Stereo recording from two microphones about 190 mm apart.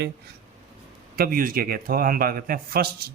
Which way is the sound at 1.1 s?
50° right (ahead or behind).